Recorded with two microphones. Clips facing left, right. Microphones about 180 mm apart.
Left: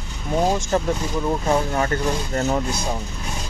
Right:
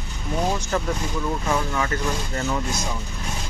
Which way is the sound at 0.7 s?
30° left (ahead or behind).